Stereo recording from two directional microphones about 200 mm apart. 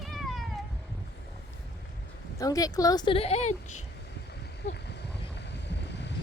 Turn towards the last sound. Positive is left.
turn(degrees=60)  # may be behind; listen again after turning